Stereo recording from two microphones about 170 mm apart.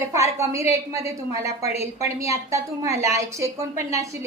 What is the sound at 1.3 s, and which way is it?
Speech, 40° left (ahead or behind).